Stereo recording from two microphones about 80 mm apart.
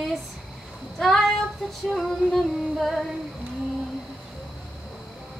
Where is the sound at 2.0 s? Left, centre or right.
Centre.